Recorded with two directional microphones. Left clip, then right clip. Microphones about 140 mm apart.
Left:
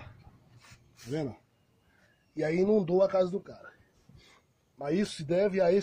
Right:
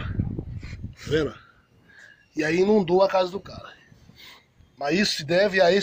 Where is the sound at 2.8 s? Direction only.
25° left (ahead or behind).